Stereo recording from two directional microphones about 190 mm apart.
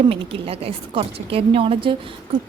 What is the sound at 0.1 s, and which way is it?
A woman's voice, 30° right (ahead or behind).